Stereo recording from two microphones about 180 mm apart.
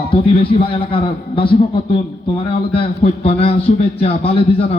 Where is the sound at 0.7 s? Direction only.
30° left (ahead or behind).